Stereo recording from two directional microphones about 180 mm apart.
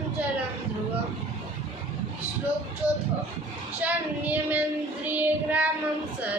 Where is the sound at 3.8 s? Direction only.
10° right (ahead or behind).